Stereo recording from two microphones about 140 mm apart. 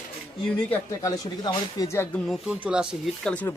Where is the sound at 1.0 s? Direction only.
25° left (ahead or behind).